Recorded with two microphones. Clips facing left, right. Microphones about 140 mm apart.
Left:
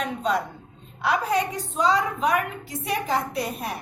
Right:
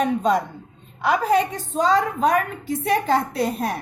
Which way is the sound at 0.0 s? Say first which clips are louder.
Right 6 dB; 45° right (ahead or behind).